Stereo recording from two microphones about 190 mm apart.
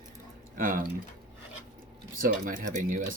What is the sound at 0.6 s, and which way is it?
Speech, 45° right (ahead or behind).